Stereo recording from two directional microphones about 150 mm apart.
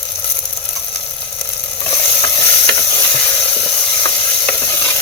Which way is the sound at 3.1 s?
15° left (ahead or behind).